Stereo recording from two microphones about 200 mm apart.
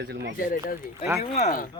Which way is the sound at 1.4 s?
40° left (ahead or behind).